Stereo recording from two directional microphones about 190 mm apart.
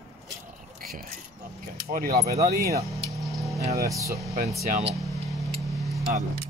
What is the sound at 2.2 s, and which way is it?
Speech, 15° right (ahead or behind).